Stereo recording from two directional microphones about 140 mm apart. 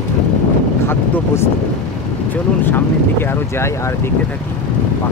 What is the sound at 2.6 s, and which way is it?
Speech, 15° left (ahead or behind).